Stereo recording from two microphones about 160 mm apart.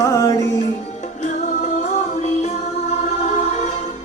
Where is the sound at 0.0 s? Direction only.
20° left (ahead or behind).